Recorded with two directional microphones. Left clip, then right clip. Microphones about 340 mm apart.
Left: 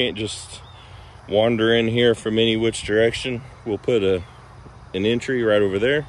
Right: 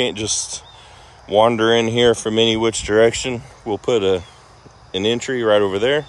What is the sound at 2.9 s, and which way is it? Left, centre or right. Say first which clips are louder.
Speech: right 5 dB; right.